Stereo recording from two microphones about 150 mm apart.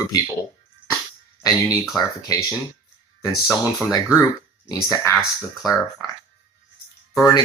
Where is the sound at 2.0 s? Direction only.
25° left (ahead or behind).